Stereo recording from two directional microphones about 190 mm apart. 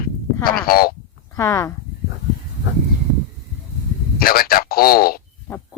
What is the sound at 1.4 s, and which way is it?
Speech, 15° left (ahead or behind).